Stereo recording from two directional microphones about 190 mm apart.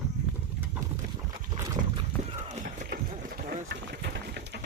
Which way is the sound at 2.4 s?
40° right (ahead or behind).